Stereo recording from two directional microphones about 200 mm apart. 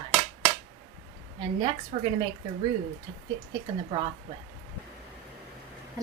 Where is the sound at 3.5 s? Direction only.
25° right (ahead or behind).